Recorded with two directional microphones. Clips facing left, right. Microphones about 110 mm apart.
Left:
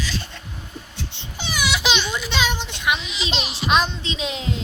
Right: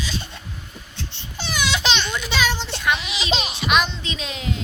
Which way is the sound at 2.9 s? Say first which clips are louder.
Even; 85° right.